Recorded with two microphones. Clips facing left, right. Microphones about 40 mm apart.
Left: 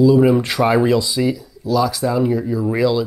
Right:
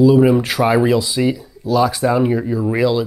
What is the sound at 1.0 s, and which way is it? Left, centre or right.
Speech, right.